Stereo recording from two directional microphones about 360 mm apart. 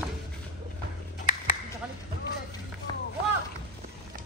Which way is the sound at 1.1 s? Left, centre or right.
Left.